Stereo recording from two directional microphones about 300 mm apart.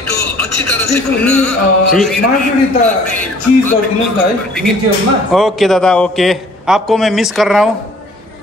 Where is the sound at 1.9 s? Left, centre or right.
Centre.